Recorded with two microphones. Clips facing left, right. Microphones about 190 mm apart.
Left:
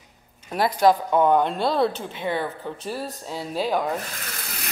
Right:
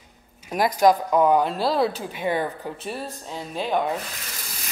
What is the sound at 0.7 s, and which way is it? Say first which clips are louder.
Speech: even; 10° right (ahead or behind).